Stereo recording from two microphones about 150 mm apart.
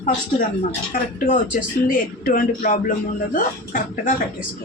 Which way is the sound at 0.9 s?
65° left (ahead or behind).